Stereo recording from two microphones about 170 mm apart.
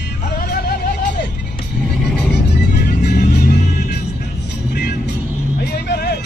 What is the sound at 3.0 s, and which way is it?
Music, 60° left (ahead or behind).